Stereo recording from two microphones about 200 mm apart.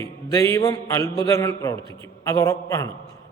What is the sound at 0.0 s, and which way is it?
A man's voice, 15° left (ahead or behind).